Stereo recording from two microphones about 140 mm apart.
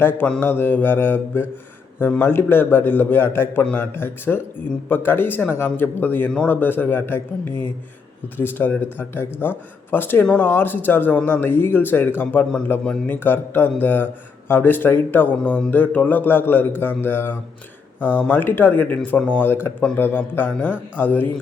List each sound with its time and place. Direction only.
0.0 s speech: 15° left (ahead or behind)